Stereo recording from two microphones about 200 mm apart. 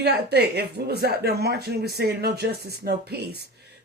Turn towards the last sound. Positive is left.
turn(degrees=-55)  # may be behind; listen again after turning